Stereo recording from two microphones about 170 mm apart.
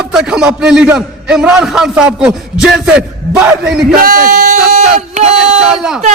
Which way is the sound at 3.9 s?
60° right (ahead or behind).